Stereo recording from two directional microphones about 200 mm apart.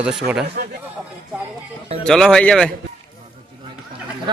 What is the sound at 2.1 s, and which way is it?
Speech, 5° left (ahead or behind).